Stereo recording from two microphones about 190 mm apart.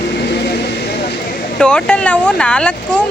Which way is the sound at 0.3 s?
60° left (ahead or behind).